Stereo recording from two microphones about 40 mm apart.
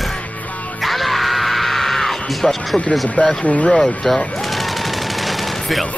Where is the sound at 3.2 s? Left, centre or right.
Centre.